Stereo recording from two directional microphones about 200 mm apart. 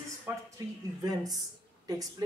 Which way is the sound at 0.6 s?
20° right (ahead or behind).